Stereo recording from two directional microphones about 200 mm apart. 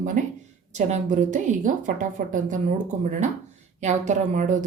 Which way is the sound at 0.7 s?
35° right (ahead or behind).